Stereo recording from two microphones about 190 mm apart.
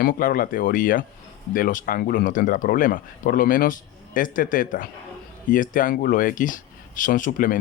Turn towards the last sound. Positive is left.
turn(degrees=45)  # may be behind; listen again after turning